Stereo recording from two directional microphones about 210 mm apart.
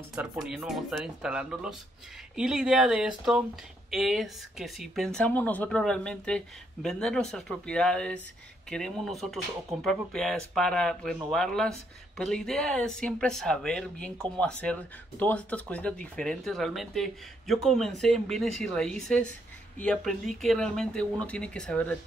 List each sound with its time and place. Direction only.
0.1 s speech: 5° right (ahead or behind)